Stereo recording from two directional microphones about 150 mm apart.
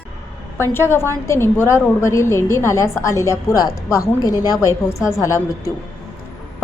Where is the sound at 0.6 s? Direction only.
15° left (ahead or behind).